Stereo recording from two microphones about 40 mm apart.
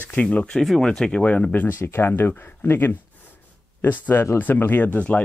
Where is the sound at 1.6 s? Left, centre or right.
Left.